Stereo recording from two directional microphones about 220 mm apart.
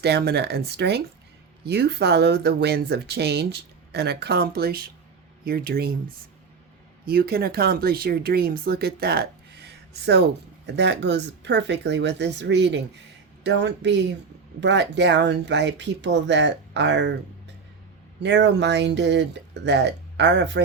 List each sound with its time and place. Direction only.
0.0 s speech: 50° right (ahead or behind)
7.0 s speech: 45° right (ahead or behind)
18.2 s speech: 55° right (ahead or behind)